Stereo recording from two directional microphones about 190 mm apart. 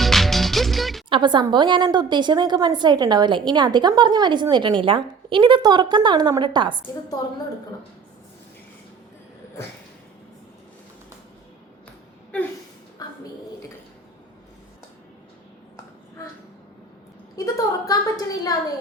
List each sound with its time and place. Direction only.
0.0 s music: centre (ahead or behind)
1.1 s a woman's voice: 25° right (ahead or behind)
13.0 s a sound: 20° left (ahead or behind)
17.3 s a woman's voice: 20° left (ahead or behind)